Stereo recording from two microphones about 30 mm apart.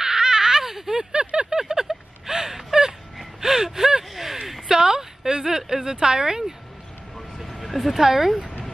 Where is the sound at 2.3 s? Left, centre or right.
Right.